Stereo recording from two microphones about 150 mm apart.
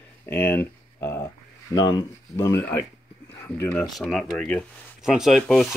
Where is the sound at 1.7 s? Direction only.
25° left (ahead or behind).